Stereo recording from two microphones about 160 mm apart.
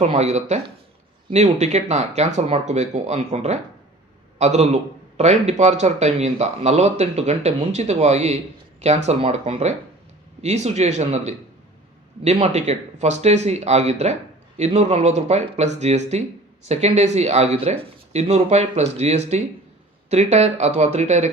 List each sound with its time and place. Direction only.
0.0 s a man's voice: 45° right (ahead or behind)